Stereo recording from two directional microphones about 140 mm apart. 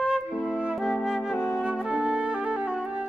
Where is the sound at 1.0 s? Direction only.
Centre (ahead or behind).